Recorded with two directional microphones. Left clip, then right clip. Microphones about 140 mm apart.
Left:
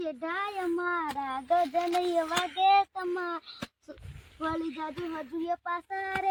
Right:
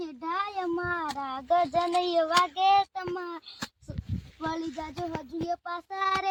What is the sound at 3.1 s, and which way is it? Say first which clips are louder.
Speech: left 3 dB; 15° right (ahead or behind).